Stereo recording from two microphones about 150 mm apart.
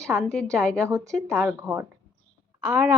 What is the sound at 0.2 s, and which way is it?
Speech, 5° left (ahead or behind).